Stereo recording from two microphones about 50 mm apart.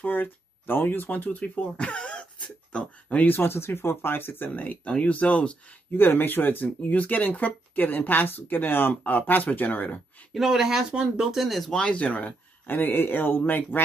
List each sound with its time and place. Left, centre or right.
0.0 s speech: left
3.3 s speech: left
4.8 s speech: left
5.9 s speech: left
10.3 s speech: centre
11.8 s speech: left
12.6 s speech: left